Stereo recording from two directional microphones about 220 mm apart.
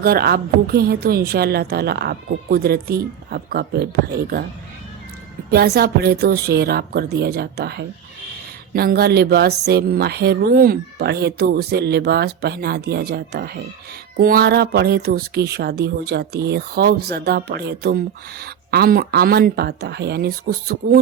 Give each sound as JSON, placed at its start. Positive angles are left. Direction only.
{"t": 0.0, "sound": "speech", "side_deg": -45}
{"t": 5.5, "sound": "speech", "side_deg": -45}